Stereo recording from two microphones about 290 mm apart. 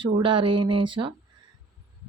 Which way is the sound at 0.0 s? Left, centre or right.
Centre.